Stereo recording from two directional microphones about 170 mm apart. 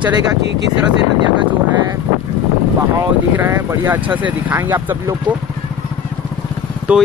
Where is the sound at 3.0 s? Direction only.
10° right (ahead or behind).